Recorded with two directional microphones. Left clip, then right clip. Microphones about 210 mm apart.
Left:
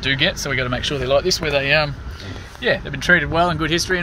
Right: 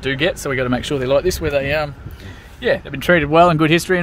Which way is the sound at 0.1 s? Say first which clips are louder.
Even; 40° right (ahead or behind).